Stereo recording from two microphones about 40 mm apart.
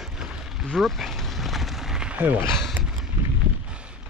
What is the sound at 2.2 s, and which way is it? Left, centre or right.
Speech, right.